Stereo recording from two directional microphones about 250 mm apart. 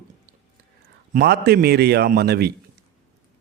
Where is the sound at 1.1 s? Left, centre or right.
Right.